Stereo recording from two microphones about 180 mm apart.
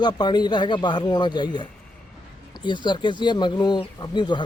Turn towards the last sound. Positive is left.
turn(degrees=25)  # may be behind; listen again after turning